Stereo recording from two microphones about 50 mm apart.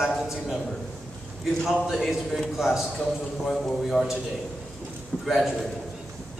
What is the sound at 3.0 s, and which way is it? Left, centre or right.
A man's voice, centre.